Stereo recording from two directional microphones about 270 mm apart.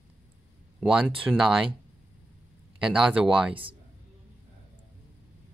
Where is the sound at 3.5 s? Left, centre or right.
Centre.